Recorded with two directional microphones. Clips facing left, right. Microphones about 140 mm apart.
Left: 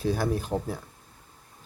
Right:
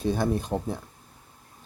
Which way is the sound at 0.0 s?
5° left (ahead or behind).